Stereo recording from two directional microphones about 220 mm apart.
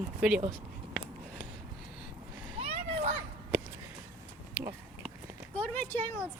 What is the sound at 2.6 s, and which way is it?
Children playing, 25° right (ahead or behind).